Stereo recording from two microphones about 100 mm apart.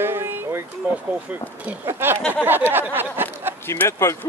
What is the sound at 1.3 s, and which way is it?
Speech, 15° right (ahead or behind).